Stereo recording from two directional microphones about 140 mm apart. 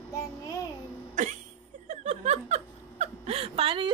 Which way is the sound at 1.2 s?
65° right (ahead or behind).